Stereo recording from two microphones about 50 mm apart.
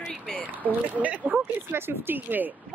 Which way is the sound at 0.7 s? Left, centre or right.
Right.